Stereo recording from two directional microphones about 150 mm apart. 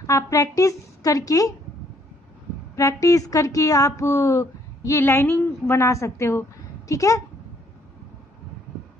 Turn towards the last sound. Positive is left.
turn(degrees=20)  # may be behind; listen again after turning